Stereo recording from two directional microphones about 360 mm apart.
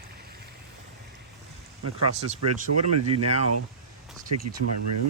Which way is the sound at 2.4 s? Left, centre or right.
Right.